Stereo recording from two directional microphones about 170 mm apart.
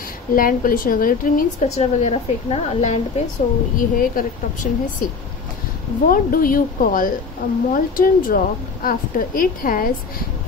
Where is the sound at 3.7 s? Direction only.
55° left (ahead or behind).